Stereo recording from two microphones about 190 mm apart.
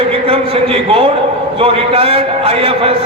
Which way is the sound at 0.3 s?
30° right (ahead or behind).